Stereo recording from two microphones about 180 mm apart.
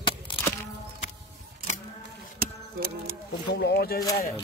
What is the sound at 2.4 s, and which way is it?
Music, 55° right (ahead or behind).